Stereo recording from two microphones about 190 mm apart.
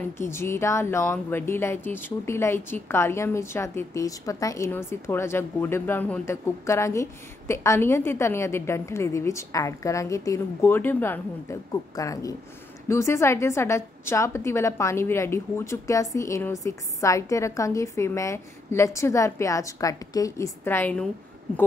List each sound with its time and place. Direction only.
0.2 s speech: 15° left (ahead or behind)